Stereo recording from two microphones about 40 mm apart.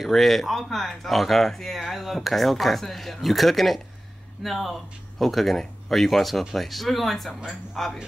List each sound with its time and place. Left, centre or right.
0.0 s speech: centre